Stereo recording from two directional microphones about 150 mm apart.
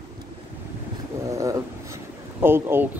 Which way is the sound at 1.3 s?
20° right (ahead or behind).